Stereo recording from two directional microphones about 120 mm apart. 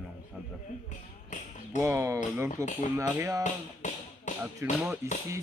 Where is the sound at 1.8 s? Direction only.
25° right (ahead or behind).